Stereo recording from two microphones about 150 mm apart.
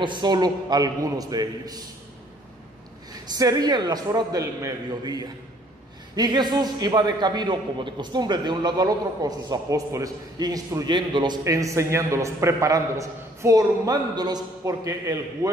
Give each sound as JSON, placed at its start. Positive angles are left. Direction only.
{"t": 0.0, "sound": "a man's voice", "side_deg": -30}
{"t": 3.1, "sound": "a man's voice", "side_deg": -25}